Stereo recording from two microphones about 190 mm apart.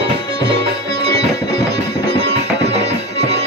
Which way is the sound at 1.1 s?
35° right (ahead or behind).